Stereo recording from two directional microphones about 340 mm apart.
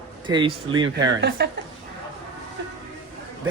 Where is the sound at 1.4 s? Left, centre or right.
Right.